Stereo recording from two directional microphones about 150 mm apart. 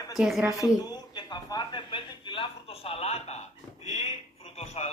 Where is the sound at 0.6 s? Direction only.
25° left (ahead or behind).